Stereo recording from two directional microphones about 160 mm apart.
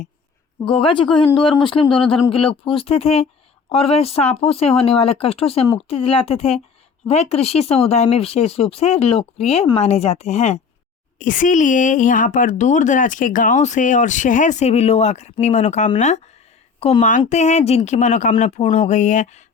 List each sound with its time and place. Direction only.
0.7 s a woman's voice: 35° left (ahead or behind)
11.2 s a woman's voice: 55° left (ahead or behind)